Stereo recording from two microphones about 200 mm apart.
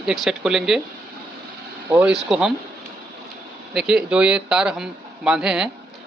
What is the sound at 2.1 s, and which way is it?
Speech, centre (ahead or behind).